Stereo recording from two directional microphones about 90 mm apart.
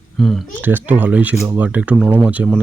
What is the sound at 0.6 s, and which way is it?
Speech, 20° right (ahead or behind).